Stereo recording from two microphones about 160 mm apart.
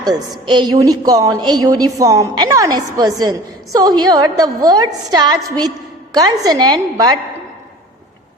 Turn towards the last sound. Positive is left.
turn(degrees=-25)  # may be behind; listen again after turning